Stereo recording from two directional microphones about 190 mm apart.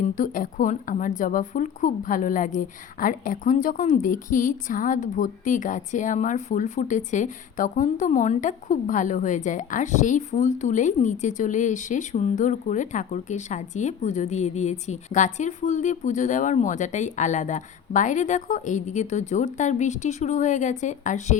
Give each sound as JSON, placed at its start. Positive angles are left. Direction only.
{"t": 0.0, "sound": "a woman's voice", "side_deg": 45}